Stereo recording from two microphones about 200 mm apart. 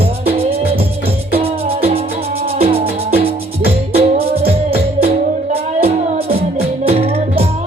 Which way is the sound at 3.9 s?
30° right (ahead or behind).